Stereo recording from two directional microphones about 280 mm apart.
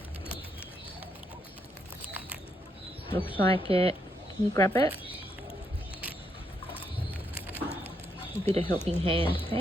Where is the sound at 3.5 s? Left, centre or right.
Right.